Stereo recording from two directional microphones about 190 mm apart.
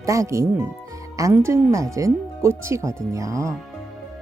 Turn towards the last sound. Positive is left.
turn(degrees=-15)  # may be behind; listen again after turning